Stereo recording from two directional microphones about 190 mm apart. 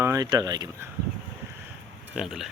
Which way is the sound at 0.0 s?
20° right (ahead or behind).